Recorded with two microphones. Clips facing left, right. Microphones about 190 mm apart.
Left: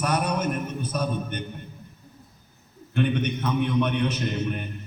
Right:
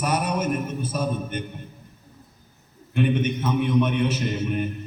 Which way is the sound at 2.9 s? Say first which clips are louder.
Right 2 dB; 5° right (ahead or behind).